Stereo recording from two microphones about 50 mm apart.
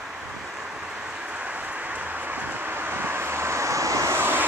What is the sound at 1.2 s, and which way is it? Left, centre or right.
Vehicle, right.